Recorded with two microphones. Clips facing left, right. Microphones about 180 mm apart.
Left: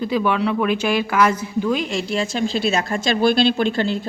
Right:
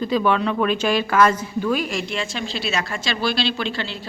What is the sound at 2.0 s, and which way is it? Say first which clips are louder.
Speech: left 6 dB; 40° left (ahead or behind).